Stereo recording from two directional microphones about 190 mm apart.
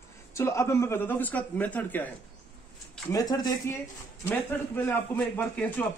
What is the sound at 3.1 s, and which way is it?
A man's voice, 20° left (ahead or behind).